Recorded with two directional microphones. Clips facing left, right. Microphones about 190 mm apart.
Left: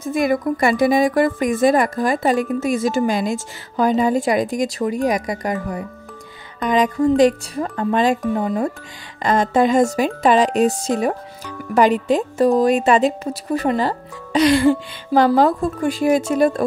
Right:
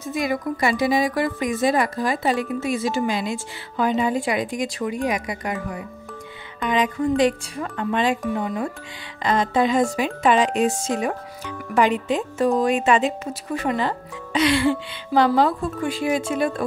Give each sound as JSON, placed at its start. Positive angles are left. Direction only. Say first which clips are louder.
{"t": 0.0, "sound": "speech", "louder": "left 6 dB", "side_deg": 50}
{"t": 9.2, "sound": "speech", "louder": "left 4 dB", "side_deg": 50}